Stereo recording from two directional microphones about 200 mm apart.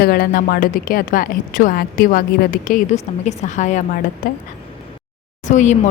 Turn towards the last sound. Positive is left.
turn(degrees=35)  # may be behind; listen again after turning